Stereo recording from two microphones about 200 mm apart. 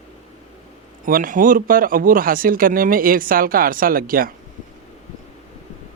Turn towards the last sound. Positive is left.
turn(degrees=-45)  # may be behind; listen again after turning